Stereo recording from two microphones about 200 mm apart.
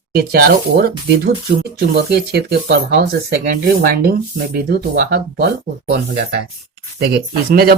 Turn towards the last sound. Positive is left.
turn(degrees=-50)  # may be behind; listen again after turning